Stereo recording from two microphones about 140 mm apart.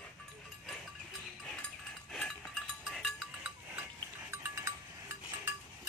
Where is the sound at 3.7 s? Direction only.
20° right (ahead or behind).